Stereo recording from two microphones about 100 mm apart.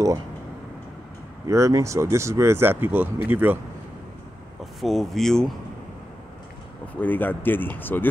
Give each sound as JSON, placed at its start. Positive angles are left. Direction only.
{"t": 1.5, "sound": "speech", "side_deg": -30}
{"t": 4.7, "sound": "speech", "side_deg": 0}
{"t": 7.0, "sound": "speech", "side_deg": 20}